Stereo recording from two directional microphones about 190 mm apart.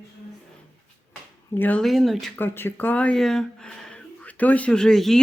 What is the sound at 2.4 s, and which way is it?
Speech, 10° left (ahead or behind).